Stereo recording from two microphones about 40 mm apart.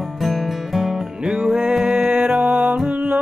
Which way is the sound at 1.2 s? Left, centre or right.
Centre.